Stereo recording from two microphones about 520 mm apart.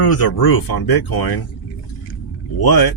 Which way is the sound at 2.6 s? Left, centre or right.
Left.